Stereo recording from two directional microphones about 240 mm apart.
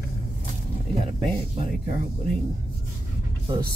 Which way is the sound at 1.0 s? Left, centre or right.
Right.